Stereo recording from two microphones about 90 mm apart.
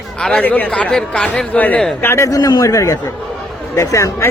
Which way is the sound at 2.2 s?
45° left (ahead or behind).